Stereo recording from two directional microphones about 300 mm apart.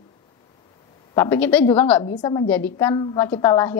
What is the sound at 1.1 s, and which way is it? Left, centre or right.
A woman's voice, centre.